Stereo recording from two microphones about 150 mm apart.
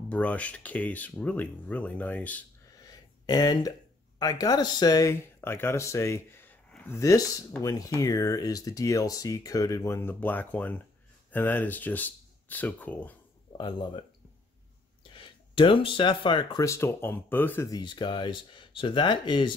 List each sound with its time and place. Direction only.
0.1 s speech: 10° left (ahead or behind)
2.9 s a sound: 25° left (ahead or behind)
4.2 s speech: 25° left (ahead or behind)
13.5 s speech: 30° left (ahead or behind)
15.1 s speech: 35° left (ahead or behind)
16.6 s speech: 15° left (ahead or behind)
17.6 s speech: 30° left (ahead or behind)